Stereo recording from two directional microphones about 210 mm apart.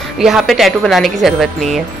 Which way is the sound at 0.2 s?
Centre (ahead or behind).